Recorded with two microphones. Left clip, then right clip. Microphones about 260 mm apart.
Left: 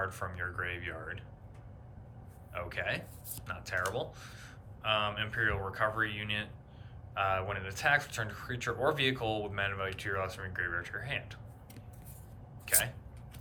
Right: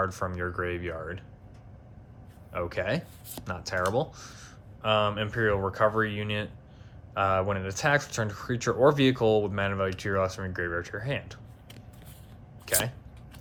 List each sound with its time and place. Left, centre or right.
0.0 s speech: centre
2.5 s speech: centre
12.6 s speech: centre